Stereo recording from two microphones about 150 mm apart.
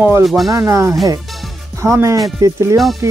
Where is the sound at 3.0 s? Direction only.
20° right (ahead or behind).